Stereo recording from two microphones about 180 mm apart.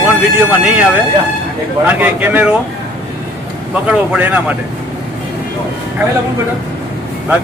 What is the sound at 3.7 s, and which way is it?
Speech, 5° right (ahead or behind).